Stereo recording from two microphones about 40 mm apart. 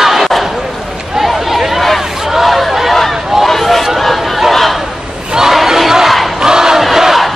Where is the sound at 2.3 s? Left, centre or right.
Centre.